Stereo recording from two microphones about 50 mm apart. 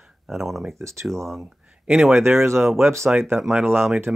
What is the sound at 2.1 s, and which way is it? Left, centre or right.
Speech, right.